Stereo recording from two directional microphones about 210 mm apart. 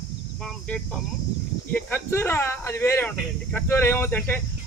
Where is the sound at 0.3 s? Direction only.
5° left (ahead or behind).